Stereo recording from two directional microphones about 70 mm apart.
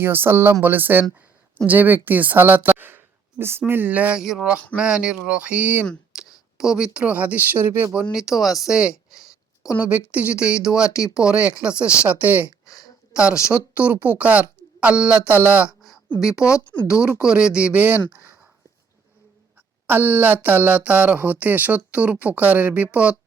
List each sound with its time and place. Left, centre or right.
0.0 s speech: right
4.2 s speech: centre
6.1 s speech: centre; by 7.9 s right
8.1 s speech: centre
9.6 s speech: centre
10.9 s speech: left
11.2 s speech: centre
13.1 s a woman's voice: centre
15.3 s speech: right
19.9 s speech: right